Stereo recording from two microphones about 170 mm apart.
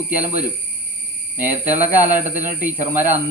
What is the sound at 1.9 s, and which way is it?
Speech, 10° right (ahead or behind).